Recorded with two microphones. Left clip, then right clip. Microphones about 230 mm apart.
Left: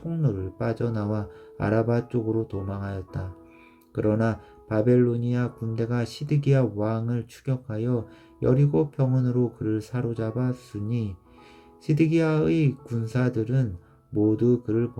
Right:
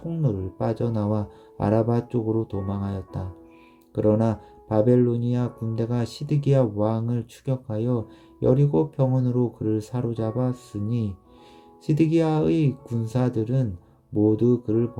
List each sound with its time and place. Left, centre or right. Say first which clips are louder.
0.1 s speech: right 1 dB; centre